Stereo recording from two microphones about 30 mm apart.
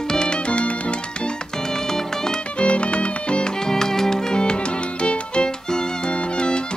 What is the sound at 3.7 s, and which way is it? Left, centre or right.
Music, centre.